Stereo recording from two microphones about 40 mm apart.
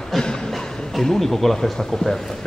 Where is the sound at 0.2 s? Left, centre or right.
Centre.